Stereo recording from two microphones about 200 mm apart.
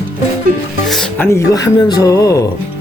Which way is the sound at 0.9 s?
Centre (ahead or behind).